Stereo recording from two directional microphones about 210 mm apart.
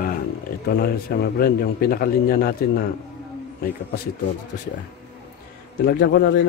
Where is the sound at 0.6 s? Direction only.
50° left (ahead or behind).